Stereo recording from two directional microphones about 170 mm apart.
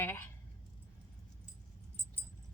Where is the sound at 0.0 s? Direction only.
15° left (ahead or behind).